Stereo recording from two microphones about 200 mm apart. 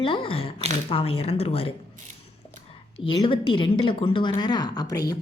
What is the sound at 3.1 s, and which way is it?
Speech, 25° left (ahead or behind).